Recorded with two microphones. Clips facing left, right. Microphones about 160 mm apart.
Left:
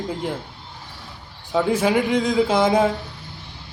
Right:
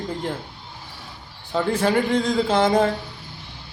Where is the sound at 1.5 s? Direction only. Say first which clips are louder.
Left 2 dB; 10° left (ahead or behind).